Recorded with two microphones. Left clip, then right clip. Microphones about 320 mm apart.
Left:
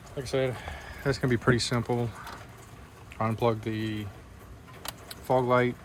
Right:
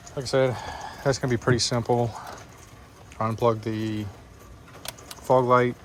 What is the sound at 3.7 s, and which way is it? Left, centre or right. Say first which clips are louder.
Speech: right 3 dB; right.